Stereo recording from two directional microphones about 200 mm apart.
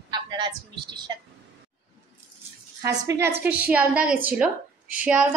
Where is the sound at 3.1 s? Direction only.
10° right (ahead or behind).